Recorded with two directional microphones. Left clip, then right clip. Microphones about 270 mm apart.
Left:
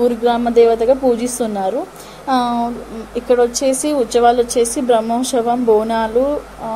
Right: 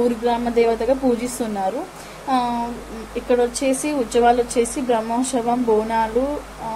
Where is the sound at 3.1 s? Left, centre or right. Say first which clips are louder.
Left 5 dB; left.